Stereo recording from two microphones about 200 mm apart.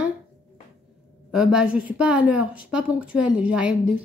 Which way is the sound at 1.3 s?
5° right (ahead or behind).